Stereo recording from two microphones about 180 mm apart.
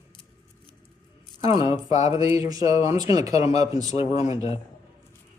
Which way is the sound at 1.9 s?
40° left (ahead or behind).